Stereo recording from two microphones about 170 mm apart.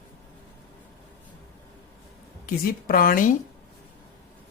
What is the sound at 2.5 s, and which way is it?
Speech, 60° left (ahead or behind).